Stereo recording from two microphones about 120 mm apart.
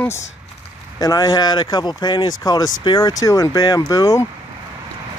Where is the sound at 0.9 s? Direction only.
35° left (ahead or behind).